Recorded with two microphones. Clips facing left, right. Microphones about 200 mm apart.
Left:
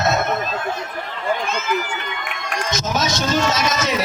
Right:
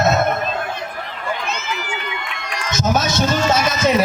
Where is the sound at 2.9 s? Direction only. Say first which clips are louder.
Left 1 dB; 55° right (ahead or behind).